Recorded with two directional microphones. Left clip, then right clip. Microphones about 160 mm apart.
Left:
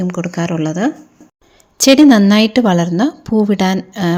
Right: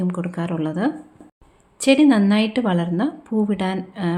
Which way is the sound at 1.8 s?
45° left (ahead or behind).